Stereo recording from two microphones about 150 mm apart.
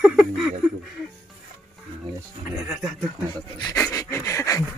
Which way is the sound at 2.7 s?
Centre (ahead or behind).